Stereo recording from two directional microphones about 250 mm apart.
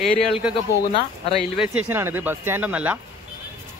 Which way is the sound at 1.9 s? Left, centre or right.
Centre.